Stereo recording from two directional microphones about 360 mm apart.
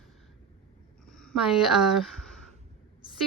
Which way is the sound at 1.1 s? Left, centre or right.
Centre.